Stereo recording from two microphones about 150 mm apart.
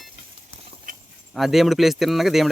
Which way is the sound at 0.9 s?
70° right (ahead or behind).